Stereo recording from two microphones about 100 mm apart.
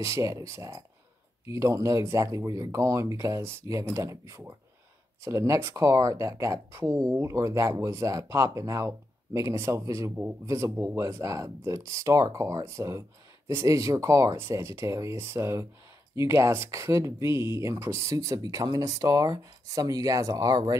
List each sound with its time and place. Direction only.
0.0 s speech: 30° right (ahead or behind)